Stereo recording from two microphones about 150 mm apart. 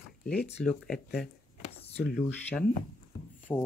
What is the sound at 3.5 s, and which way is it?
Speech, 15° left (ahead or behind).